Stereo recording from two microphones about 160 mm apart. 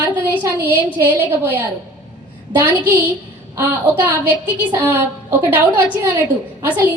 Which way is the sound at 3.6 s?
10° right (ahead or behind).